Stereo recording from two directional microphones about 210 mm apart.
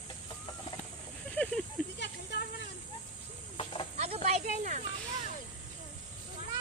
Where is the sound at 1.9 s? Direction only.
55° left (ahead or behind).